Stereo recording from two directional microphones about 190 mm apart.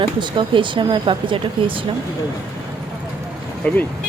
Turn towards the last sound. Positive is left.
turn(degrees=10)  # may be behind; listen again after turning